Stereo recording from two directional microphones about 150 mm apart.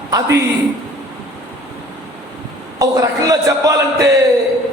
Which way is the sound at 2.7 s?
20° right (ahead or behind).